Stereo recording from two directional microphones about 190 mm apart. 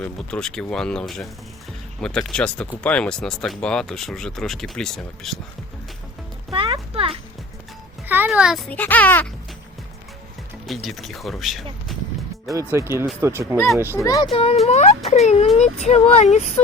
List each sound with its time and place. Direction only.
0.0 s speech: 5° left (ahead or behind)
6.5 s music: 25° right (ahead or behind)
8.0 s music: 10° right (ahead or behind)
8.7 s a child's voice: 10° left (ahead or behind)
10.7 s speech: centre (ahead or behind)
12.7 s speech: 15° right (ahead or behind)
13.9 s a child's voice: 15° left (ahead or behind)
14.3 s speech: 30° left (ahead or behind)